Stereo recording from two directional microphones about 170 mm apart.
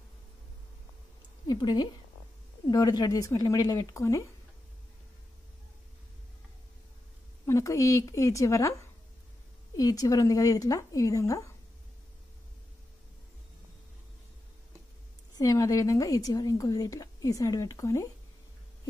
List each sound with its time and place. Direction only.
1.5 s a woman's voice: 25° left (ahead or behind)
7.4 s a woman's voice: 20° left (ahead or behind)
9.8 s a woman's voice: 20° left (ahead or behind)
15.3 s a woman's voice: 20° left (ahead or behind)